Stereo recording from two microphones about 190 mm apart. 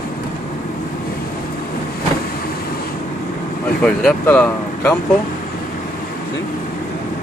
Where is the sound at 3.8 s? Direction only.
5° left (ahead or behind).